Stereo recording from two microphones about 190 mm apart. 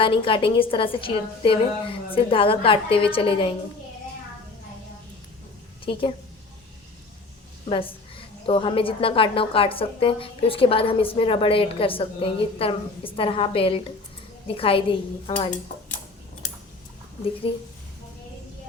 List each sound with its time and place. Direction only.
0.0 s a woman's voice: 25° left (ahead or behind)
5.8 s a woman's voice: 30° left (ahead or behind)
7.7 s a woman's voice: 30° left (ahead or behind)
17.5 s a woman's voice: 30° left (ahead or behind)